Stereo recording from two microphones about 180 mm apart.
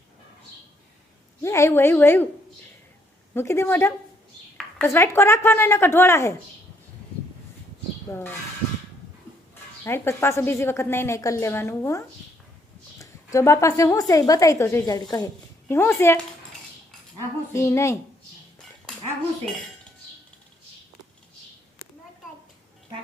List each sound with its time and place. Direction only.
1.4 s a woman's voice: 15° left (ahead or behind)
3.3 s a woman's voice: 15° left (ahead or behind)
8.1 s a woman's voice: 10° left (ahead or behind)
9.8 s a woman's voice: 15° left (ahead or behind)
17.5 s a woman's voice: 15° left (ahead or behind)